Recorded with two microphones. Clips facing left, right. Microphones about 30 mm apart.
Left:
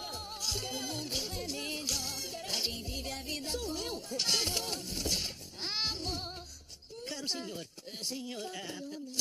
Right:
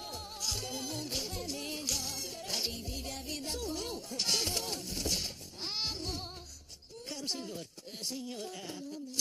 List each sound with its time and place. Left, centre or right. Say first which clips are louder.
0.0 s music: left 1 dB; centre
3.6 s speech: left 1 dB; centre
5.2 s baby cry: left 1 dB; left
7.2 s speech: even; centre